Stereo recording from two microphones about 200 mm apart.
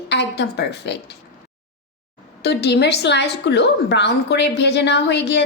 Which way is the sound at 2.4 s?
55° left (ahead or behind).